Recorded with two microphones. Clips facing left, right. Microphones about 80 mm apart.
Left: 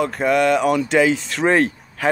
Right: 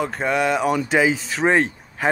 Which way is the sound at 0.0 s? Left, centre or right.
Centre.